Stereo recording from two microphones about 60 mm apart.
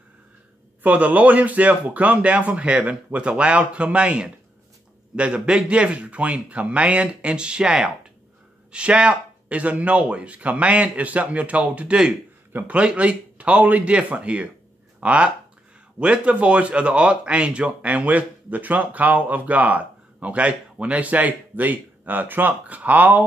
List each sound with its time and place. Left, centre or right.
0.8 s a man's voice: right